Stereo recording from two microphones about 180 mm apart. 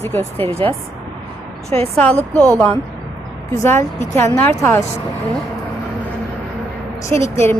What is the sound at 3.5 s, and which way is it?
Speech, 15° left (ahead or behind).